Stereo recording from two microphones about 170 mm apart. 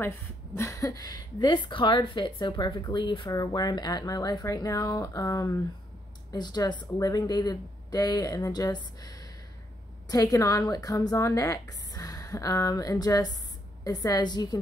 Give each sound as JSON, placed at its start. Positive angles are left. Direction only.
{"t": 0.6, "sound": "a woman's voice", "side_deg": 15}